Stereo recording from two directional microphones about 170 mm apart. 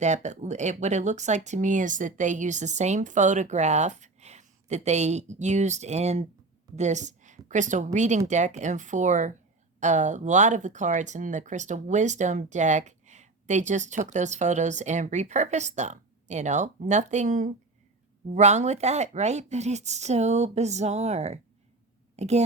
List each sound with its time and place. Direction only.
0.0 s a woman's voice: 45° right (ahead or behind)